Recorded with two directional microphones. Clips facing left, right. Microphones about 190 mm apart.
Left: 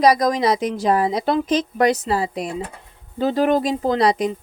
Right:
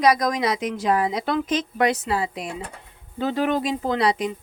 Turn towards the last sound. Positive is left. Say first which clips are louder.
# left 4 dB
turn(degrees=40)  # may be behind; listen again after turning